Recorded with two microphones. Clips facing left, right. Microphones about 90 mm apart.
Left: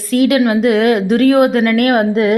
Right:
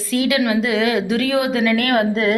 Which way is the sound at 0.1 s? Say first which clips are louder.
Left 6 dB; 50° left (ahead or behind).